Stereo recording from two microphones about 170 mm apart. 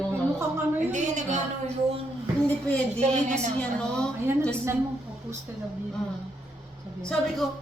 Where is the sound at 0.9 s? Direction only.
45° right (ahead or behind).